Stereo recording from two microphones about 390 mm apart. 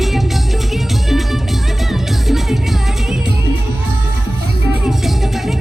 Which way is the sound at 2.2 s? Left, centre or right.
Centre.